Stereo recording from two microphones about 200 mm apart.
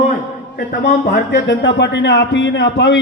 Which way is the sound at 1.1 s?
60° left (ahead or behind).